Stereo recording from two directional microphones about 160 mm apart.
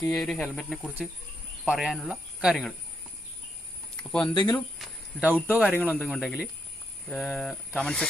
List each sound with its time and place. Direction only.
0.0 s speech: centre (ahead or behind)
3.9 s speech: 5° left (ahead or behind)
4.4 s speech: 25° left (ahead or behind)
4.8 s cricket: 10° right (ahead or behind)
5.5 s speech: 5° left (ahead or behind)